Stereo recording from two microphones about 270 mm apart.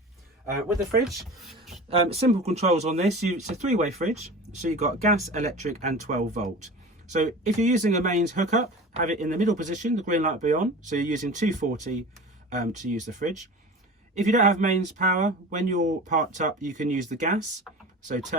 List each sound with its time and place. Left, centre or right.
1.0 s speech: centre
1.9 s speech: right